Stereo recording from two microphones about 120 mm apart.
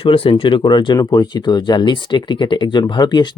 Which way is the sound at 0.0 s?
50° left (ahead or behind).